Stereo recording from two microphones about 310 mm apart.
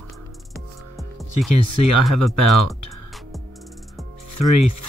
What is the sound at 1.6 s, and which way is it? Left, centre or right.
Speech, left.